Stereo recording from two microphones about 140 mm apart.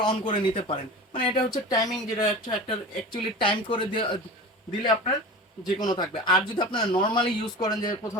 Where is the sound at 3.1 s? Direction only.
35° left (ahead or behind).